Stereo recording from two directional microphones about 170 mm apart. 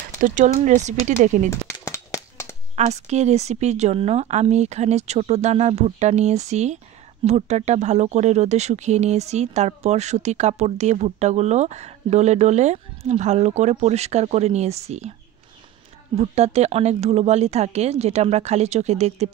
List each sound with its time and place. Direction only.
0.2 s speech: 50° right (ahead or behind)
1.9 s a sound: 20° left (ahead or behind)
2.7 s speech: 40° right (ahead or behind)
16.2 s speech: 40° right (ahead or behind)